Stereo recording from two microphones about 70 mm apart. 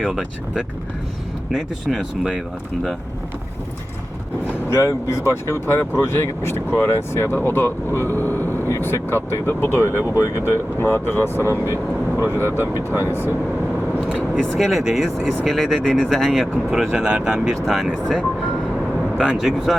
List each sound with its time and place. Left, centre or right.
1.5 s speech: centre
4.7 s speech: left
8.1 s vehicle: left
8.7 s speech: left
12.7 s speech: left
14.1 s speech: centre
14.5 s speech: centre
16.6 s speech: centre
17.8 s speech: centre
19.4 s speech: centre